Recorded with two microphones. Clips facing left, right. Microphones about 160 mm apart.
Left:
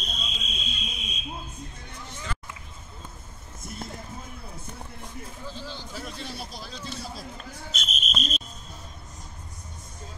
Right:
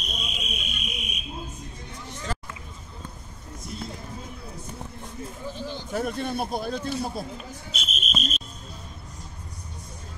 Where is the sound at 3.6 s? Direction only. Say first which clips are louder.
Right 2 dB; 50° left (ahead or behind).